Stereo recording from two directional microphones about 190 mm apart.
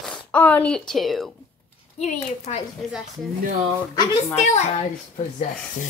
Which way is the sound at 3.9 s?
30° left (ahead or behind).